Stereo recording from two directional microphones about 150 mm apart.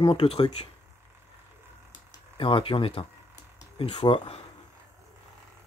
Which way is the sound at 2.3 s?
35° left (ahead or behind).